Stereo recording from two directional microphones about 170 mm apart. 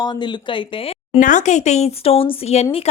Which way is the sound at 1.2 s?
50° left (ahead or behind).